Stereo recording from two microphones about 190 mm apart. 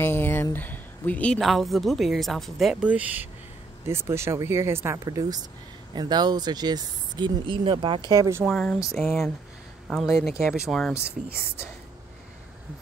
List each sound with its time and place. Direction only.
0.0 s speech: 10° left (ahead or behind); by 8.0 s 25° right (ahead or behind)
8.1 s speech: 15° right (ahead or behind)
8.5 s speech: centre (ahead or behind)